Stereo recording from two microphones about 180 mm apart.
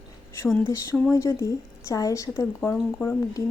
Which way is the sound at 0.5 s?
10° left (ahead or behind).